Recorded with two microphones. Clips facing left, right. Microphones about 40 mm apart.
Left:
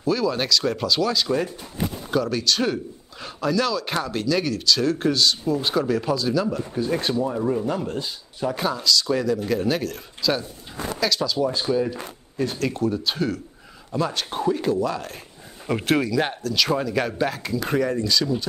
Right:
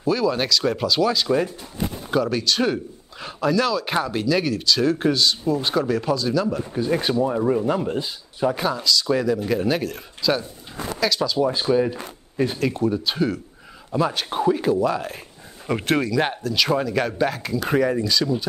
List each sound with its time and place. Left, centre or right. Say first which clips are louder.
0.0 s speech: right 2 dB; centre
6.7 s speech: right 2 dB; centre
11.4 s speech: right 4 dB; centre
12.6 s speech: right 2 dB; centre